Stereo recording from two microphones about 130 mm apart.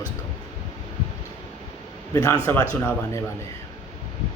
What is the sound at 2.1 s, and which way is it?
A man's voice, 25° left (ahead or behind).